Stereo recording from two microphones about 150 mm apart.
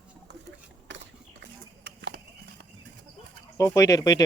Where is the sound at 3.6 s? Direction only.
20° left (ahead or behind).